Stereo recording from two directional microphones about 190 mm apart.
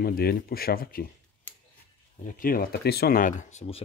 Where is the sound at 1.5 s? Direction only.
10° left (ahead or behind).